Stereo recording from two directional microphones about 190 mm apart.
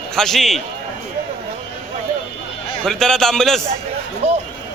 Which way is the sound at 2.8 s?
Centre (ahead or behind).